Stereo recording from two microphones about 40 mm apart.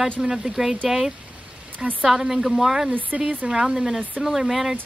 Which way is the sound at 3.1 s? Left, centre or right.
Right.